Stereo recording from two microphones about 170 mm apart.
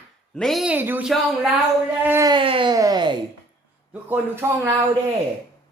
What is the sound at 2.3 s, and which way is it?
Speech, 30° right (ahead or behind).